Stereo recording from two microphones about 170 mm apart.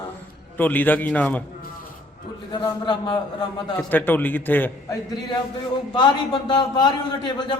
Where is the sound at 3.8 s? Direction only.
10° left (ahead or behind).